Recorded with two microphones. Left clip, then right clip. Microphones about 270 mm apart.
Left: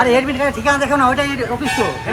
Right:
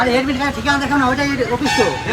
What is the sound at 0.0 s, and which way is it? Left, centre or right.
Speech, left.